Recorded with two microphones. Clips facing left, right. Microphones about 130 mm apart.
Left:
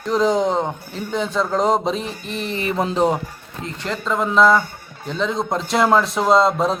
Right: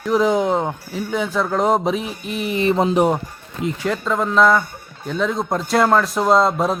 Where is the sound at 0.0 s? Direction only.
5° right (ahead or behind).